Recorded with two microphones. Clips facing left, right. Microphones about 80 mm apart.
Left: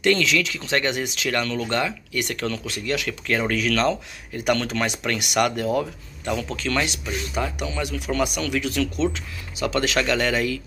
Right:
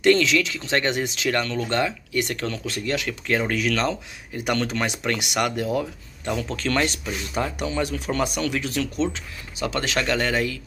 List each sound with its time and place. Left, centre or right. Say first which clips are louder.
0.0 s speech: right 2 dB; right
6.5 s speech: right 1 dB; right